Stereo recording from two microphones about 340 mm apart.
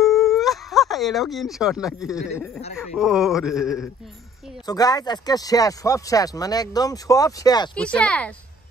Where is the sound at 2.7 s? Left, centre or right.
Centre.